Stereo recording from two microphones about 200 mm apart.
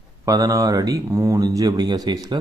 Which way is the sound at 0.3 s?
15° right (ahead or behind).